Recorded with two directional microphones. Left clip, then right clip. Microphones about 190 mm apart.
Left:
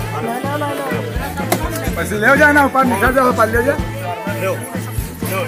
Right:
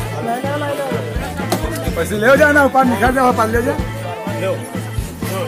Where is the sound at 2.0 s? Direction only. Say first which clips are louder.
Even; 45° right (ahead or behind).